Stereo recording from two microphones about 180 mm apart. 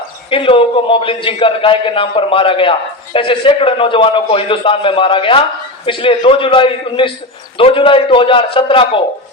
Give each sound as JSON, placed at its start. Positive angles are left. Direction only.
{"t": 0.3, "sound": "a man's voice", "side_deg": 30}